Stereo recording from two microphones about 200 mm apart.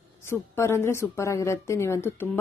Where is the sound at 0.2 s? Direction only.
10° left (ahead or behind).